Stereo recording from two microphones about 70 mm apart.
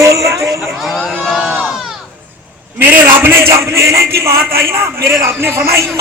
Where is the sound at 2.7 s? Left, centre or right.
Right.